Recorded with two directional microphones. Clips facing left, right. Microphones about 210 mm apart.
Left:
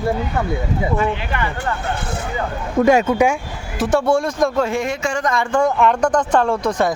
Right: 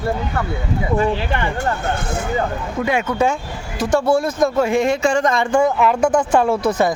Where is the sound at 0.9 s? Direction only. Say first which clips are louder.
Right 2 dB; 35° right (ahead or behind).